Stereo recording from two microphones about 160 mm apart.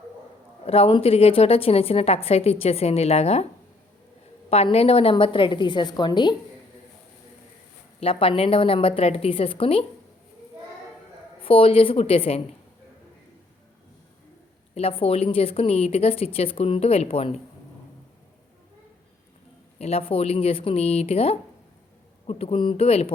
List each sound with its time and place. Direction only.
0.6 s a woman's voice: 35° left (ahead or behind)
4.4 s a woman's voice: 40° left (ahead or behind)
8.0 s a woman's voice: 35° left (ahead or behind)
11.3 s a woman's voice: 35° left (ahead or behind)
14.8 s a woman's voice: 35° left (ahead or behind)
19.8 s a woman's voice: 40° left (ahead or behind)